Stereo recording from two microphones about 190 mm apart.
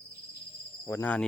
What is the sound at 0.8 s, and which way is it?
Speech, 10° left (ahead or behind).